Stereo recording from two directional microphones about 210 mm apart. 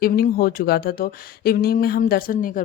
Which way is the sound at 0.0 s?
45° left (ahead or behind).